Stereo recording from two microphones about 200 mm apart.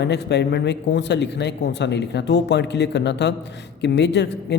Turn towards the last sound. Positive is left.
turn(degrees=60)  # may be behind; listen again after turning